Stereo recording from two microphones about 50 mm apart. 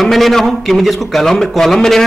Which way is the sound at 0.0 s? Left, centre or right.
Centre.